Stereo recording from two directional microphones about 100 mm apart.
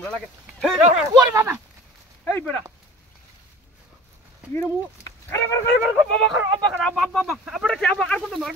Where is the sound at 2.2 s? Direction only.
20° left (ahead or behind).